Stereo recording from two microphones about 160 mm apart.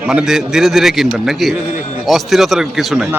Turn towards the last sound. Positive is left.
turn(degrees=0)  # may be behind; listen again after turning